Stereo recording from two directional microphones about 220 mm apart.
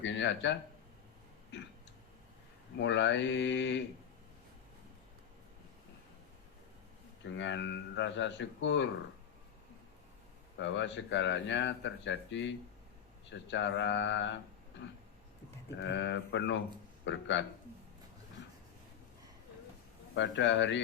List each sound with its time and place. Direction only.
0.0 s speech: 55° left (ahead or behind)
2.7 s speech: 55° left (ahead or behind)
7.3 s speech: 55° left (ahead or behind)
10.6 s speech: 55° left (ahead or behind)
15.8 s speech: 55° left (ahead or behind)
20.1 s speech: 55° left (ahead or behind)